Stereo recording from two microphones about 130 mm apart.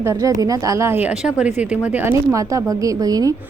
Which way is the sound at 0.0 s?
25° right (ahead or behind).